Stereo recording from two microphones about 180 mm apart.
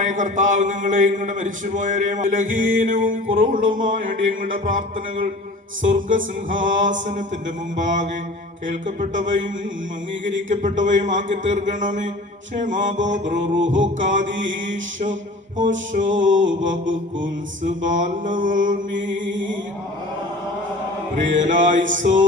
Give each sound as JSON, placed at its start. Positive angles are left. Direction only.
{"t": 0.0, "sound": "a man's voice", "side_deg": -45}
{"t": 5.9, "sound": "a man's voice", "side_deg": -45}
{"t": 10.5, "sound": "a man's voice", "side_deg": -45}
{"t": 16.1, "sound": "music", "side_deg": -90}
{"t": 17.6, "sound": "a man's voice", "side_deg": -45}
{"t": 19.1, "sound": "music", "side_deg": -90}
{"t": 21.3, "sound": "a man's voice", "side_deg": -45}